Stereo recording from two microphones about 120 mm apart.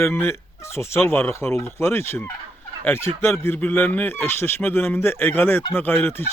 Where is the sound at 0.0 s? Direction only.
20° left (ahead or behind).